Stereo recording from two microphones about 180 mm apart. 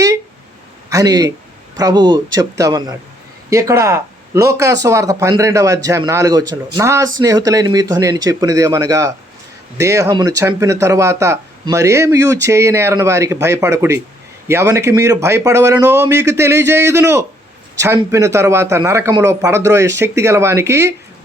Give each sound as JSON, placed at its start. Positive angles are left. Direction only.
{"t": 0.9, "sound": "a man's voice", "side_deg": -20}